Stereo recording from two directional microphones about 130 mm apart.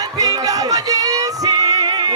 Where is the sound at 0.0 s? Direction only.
25° right (ahead or behind).